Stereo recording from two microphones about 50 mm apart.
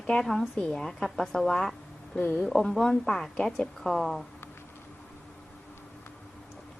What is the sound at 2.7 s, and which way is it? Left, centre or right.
A woman's voice, centre.